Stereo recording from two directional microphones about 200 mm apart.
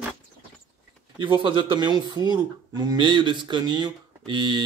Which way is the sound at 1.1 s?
25° right (ahead or behind).